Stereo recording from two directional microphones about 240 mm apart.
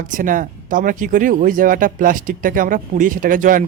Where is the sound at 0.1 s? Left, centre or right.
Right.